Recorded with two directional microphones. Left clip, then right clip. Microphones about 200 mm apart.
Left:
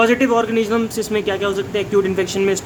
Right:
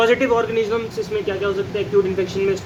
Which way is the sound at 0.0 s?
20° left (ahead or behind).